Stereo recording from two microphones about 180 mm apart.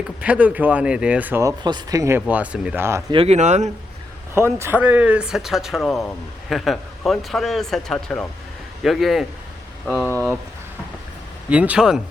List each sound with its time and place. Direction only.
0.2 s speech: 10° right (ahead or behind)
3.1 s speech: 35° right (ahead or behind)
4.5 s speech: 10° right (ahead or behind); by 10.3 s 10° left (ahead or behind)
11.4 s speech: 10° right (ahead or behind)